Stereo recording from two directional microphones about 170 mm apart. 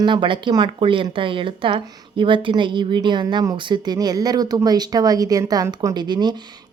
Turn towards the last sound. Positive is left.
turn(degrees=-25)  # may be behind; listen again after turning